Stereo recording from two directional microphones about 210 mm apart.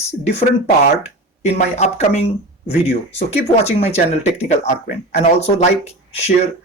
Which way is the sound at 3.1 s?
30° left (ahead or behind).